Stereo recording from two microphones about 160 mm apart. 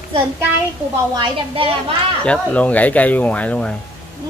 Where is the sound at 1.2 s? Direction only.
35° right (ahead or behind).